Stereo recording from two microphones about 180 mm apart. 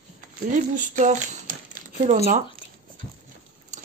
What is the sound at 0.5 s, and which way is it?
Speech, 45° right (ahead or behind).